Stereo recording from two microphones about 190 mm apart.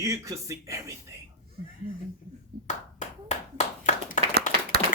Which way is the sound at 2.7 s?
35° left (ahead or behind).